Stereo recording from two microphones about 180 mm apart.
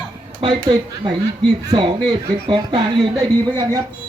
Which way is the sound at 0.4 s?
25° right (ahead or behind).